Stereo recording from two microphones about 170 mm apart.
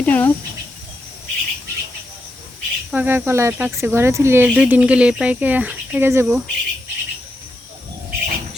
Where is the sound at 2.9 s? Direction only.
10° right (ahead or behind).